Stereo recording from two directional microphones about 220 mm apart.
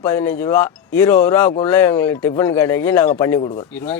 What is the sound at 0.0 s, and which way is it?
Speech, 20° left (ahead or behind).